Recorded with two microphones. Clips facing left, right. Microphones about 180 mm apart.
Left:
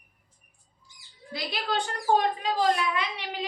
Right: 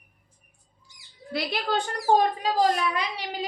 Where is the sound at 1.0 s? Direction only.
65° right (ahead or behind).